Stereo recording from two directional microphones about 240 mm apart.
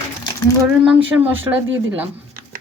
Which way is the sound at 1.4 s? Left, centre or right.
Right.